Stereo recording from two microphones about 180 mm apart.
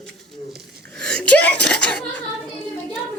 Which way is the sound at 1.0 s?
5° left (ahead or behind).